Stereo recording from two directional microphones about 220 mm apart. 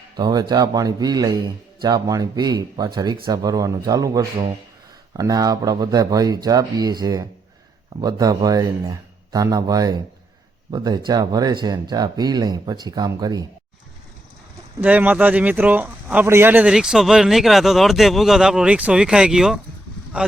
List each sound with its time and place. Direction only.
0.2 s speech: 20° right (ahead or behind)
14.8 s speech: 5° right (ahead or behind)